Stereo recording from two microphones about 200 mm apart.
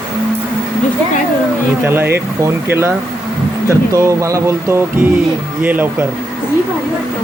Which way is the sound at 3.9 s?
15° right (ahead or behind).